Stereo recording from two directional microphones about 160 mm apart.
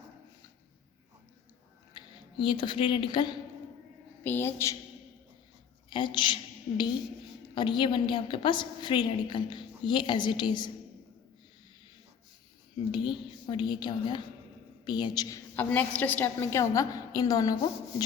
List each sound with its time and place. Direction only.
1.9 s speech: 30° left (ahead or behind)
4.2 s a woman's voice: 15° left (ahead or behind)
5.9 s a woman's voice: 30° left (ahead or behind)
12.9 s a woman's voice: 30° left (ahead or behind)
15.5 s a woman's voice: 10° left (ahead or behind)